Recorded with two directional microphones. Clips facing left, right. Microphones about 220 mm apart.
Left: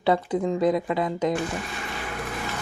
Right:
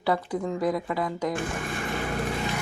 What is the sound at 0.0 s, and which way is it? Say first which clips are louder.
Speech: left 4 dB; 20° left (ahead or behind).